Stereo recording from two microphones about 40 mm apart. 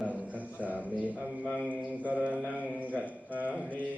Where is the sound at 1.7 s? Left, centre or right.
Right.